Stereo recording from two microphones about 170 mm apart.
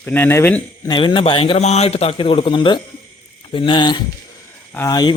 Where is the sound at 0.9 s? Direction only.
30° left (ahead or behind).